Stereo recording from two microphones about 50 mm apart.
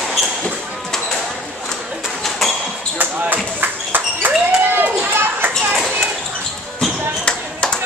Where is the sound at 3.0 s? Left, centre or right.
Right.